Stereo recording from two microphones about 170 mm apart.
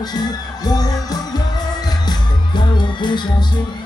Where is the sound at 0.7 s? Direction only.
25° left (ahead or behind).